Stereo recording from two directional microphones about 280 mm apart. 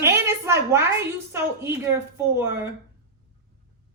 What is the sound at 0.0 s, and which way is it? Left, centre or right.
A woman's voice, centre.